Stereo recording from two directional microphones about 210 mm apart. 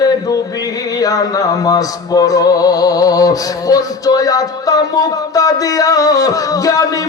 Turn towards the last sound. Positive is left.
turn(degrees=15)  # may be behind; listen again after turning